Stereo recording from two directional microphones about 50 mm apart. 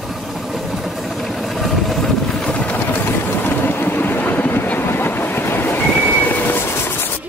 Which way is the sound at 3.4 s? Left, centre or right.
Left.